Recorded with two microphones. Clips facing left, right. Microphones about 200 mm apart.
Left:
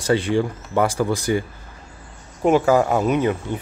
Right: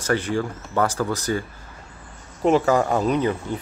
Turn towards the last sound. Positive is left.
turn(degrees=10)  # may be behind; listen again after turning